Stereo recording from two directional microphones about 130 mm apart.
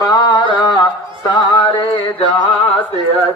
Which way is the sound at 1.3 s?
35° left (ahead or behind).